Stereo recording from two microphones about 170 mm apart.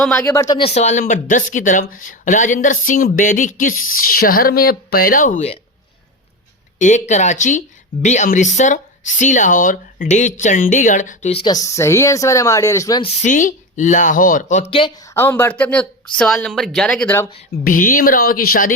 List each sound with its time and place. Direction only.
0.0 s speech: 5° left (ahead or behind)
0.3 s speech: 20° left (ahead or behind)
0.6 s speech: 40° left (ahead or behind)
6.7 s speech: 45° left (ahead or behind)
11.4 s speech: 20° left (ahead or behind)
13.2 s speech: 50° left (ahead or behind)
14.7 s speech: 30° left (ahead or behind)
15.0 s speech: 15° left (ahead or behind)
17.6 s speech: 55° left (ahead or behind)